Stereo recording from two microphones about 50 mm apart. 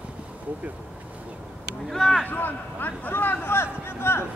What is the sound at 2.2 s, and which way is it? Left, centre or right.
Speech, left.